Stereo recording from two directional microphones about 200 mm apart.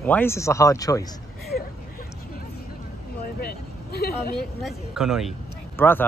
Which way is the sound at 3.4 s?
50° left (ahead or behind).